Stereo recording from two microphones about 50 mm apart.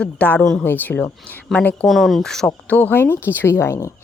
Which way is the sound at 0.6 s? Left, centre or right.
Left.